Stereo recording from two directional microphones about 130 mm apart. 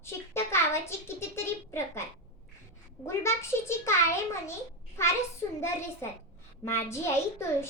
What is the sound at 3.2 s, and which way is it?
A child's voice, 20° left (ahead or behind).